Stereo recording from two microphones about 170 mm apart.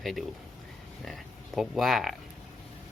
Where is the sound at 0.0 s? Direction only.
Centre (ahead or behind).